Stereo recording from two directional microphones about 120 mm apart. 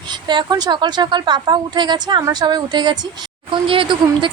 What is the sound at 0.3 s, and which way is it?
A woman's voice, 35° right (ahead or behind).